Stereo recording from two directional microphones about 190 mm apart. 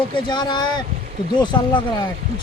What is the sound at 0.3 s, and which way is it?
Speech, 25° left (ahead or behind).